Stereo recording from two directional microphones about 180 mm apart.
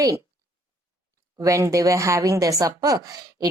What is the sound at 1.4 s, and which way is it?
Speech, 15° right (ahead or behind).